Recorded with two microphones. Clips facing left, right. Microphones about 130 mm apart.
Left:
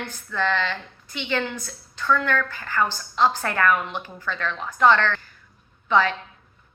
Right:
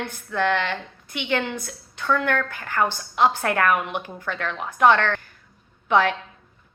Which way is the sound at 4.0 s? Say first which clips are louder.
Even; 60° right (ahead or behind).